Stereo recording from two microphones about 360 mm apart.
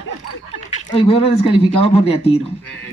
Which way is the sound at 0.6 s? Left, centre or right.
Centre.